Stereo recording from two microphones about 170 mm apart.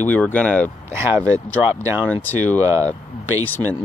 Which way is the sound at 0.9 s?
15° right (ahead or behind).